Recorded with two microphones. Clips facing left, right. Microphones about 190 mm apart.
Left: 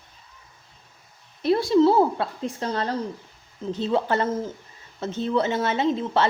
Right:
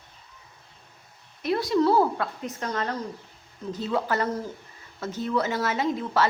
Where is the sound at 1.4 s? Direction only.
30° left (ahead or behind).